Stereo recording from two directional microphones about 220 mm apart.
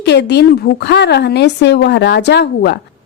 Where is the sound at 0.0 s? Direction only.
50° left (ahead or behind).